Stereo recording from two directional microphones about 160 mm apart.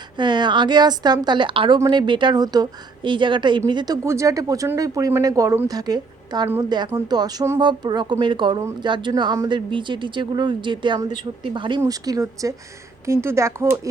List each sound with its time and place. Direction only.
0.2 s speech: 30° right (ahead or behind)